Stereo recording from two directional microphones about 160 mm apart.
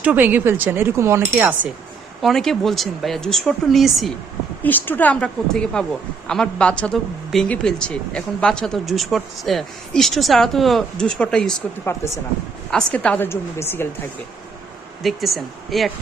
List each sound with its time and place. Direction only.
0.0 s speech: 10° right (ahead or behind)
2.2 s speech: centre (ahead or behind)
4.6 s a woman's voice: 10° left (ahead or behind)
11.9 s a woman's voice: 15° left (ahead or behind)
12.7 s a woman's voice: 5° left (ahead or behind)
15.0 s speech: centre (ahead or behind)